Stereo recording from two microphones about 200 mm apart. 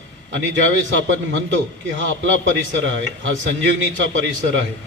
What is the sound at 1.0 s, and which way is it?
A man's voice, 65° right (ahead or behind).